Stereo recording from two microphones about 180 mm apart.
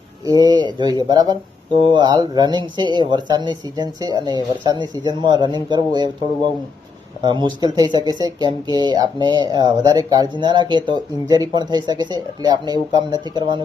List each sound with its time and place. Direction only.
0.3 s speech: 20° right (ahead or behind)